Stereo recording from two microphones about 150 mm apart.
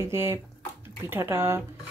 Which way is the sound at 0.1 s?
15° right (ahead or behind).